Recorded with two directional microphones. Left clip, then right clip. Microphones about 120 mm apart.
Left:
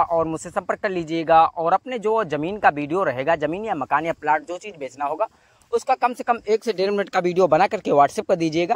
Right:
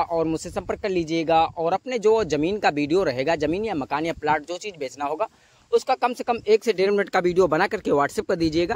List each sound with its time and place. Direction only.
0.0 s speech: 15° right (ahead or behind); by 8.7 s 5° left (ahead or behind)